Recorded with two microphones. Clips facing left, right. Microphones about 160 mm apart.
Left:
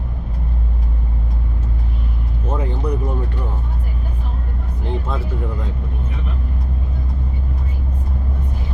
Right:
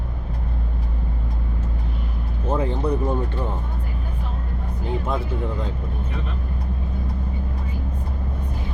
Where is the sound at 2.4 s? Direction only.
30° right (ahead or behind).